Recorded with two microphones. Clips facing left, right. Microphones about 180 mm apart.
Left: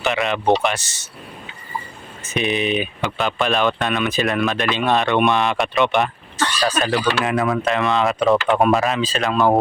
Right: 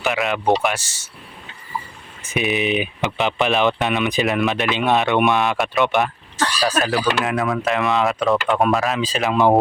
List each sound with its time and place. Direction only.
0.0 s speech: centre (ahead or behind)
2.2 s speech: 5° right (ahead or behind)
2.6 s speech: 20° right (ahead or behind)
4.9 s speech: centre (ahead or behind)
9.0 s speech: 10° right (ahead or behind)